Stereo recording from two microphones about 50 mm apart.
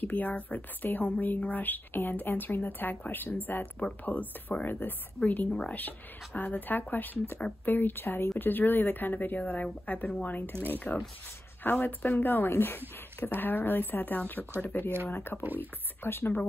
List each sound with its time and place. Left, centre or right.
0.0 s a woman's voice: left
15.4 s speech: right
16.0 s a woman's voice: left